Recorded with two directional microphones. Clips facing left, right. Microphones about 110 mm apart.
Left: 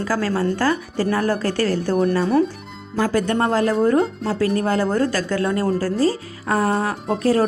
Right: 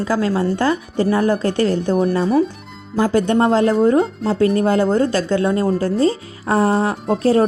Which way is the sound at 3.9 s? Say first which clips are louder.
Right 2 dB; centre (ahead or behind).